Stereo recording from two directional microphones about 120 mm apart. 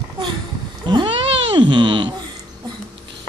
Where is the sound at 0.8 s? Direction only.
40° right (ahead or behind).